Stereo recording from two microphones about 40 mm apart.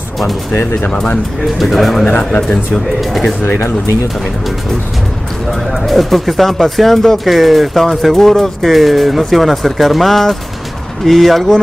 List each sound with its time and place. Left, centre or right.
1.6 s speech: centre
2.0 s speech: left
3.0 s speech: centre
5.5 s speech: centre